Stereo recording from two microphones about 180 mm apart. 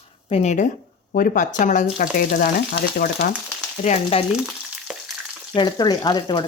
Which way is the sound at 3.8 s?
35° left (ahead or behind).